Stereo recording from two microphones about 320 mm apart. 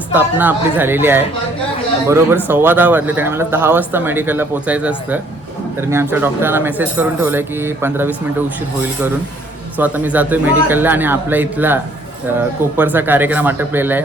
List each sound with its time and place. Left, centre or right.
0.1 s a man's voice: centre
9.7 s a man's voice: centre